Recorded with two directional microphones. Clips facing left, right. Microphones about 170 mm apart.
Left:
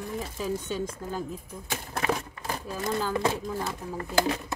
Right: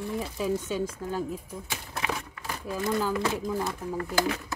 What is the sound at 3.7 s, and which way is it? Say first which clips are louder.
Speech: left 1 dB; 20° left (ahead or behind).